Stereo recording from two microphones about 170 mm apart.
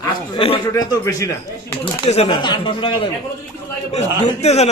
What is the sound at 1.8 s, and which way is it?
A man's voice, 35° left (ahead or behind).